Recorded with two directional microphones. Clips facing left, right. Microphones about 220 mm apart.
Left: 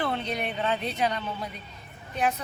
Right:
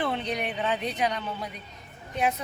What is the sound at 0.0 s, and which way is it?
Speech, 15° right (ahead or behind).